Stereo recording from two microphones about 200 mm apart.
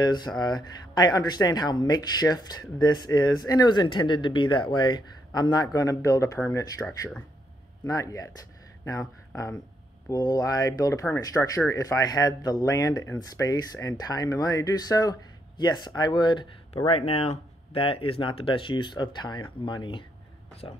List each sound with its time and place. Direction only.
0.0 s speech: 20° left (ahead or behind)